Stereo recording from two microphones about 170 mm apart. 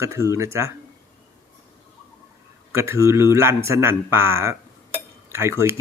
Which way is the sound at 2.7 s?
15° right (ahead or behind).